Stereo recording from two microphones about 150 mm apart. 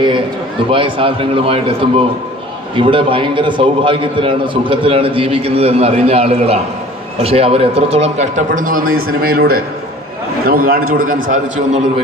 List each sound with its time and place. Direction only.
0.7 s a man's voice: 35° right (ahead or behind); by 9.6 s 85° right
10.4 s a man's voice: 75° right (ahead or behind)